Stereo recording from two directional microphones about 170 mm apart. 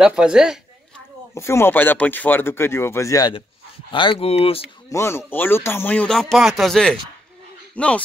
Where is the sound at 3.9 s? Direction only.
30° left (ahead or behind).